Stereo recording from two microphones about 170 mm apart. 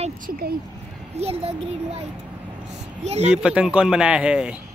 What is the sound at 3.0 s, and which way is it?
Speech, 40° right (ahead or behind).